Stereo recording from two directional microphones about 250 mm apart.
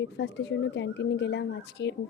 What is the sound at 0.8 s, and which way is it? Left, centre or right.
Speech, left.